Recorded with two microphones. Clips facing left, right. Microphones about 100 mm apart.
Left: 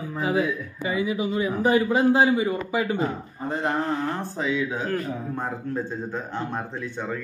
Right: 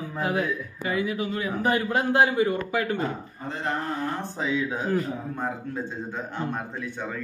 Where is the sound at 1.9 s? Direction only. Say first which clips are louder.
Left 3 dB; 5° left (ahead or behind).